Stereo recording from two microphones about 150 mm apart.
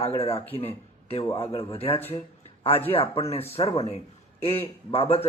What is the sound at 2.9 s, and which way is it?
Speech, 40° left (ahead or behind).